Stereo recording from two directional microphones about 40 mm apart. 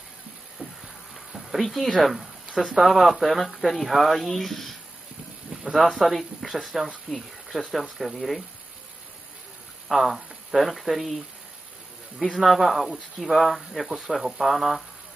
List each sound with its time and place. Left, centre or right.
0.6 s a sound: right
1.3 s speech: centre
5.5 s a sound: centre
5.8 s speech: centre
9.8 s speech: centre
12.4 s speech: centre